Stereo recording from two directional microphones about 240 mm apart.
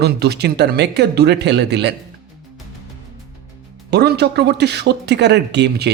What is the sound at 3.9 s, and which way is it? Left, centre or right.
Speech, right.